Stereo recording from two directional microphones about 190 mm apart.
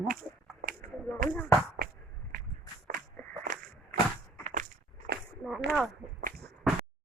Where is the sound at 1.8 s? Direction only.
50° right (ahead or behind).